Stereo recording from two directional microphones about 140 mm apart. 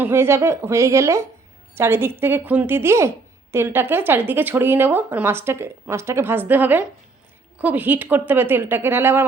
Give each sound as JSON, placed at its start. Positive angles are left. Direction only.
{"t": 0.0, "sound": "a woman's voice", "side_deg": -20}